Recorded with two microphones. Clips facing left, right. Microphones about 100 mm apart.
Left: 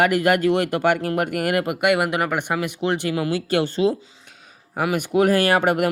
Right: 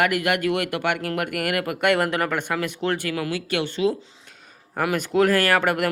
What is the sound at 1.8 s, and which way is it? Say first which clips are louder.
Speech: even; 10° left (ahead or behind).